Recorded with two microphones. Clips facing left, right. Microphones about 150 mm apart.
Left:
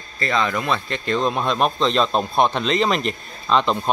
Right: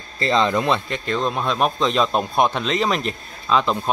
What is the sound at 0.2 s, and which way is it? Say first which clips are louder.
Speech: right 3 dB; 25° right (ahead or behind).